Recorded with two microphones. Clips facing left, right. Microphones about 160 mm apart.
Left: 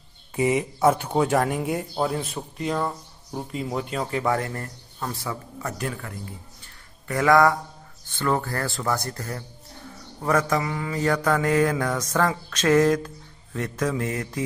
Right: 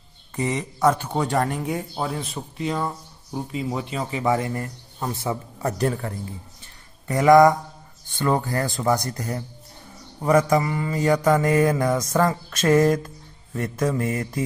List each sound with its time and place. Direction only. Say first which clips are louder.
0.4 s speech: left 2 dB; 10° left (ahead or behind); by 5.1 s 10° right (ahead or behind)
5.1 s a man's voice: right 5 dB; 25° right (ahead or behind)
7.1 s speech: right 4 dB; 20° right (ahead or behind)